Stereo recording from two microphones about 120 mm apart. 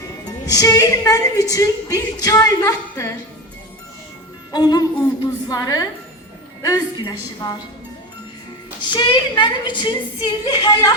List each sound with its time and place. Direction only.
0.3 s a woman's voice: 30° left (ahead or behind)
4.5 s a woman's voice: 35° left (ahead or behind)
8.8 s a woman's voice: 40° left (ahead or behind)